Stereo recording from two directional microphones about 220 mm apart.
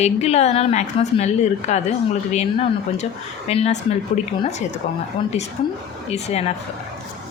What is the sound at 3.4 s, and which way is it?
A woman's voice, 30° left (ahead or behind).